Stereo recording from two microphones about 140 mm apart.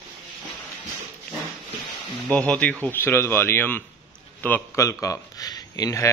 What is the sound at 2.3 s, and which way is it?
Speech, 10° left (ahead or behind).